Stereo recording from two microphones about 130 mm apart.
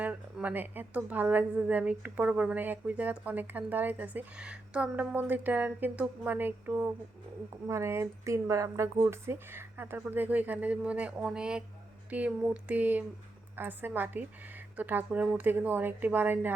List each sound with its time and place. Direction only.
0.0 s a woman's voice: 10° right (ahead or behind)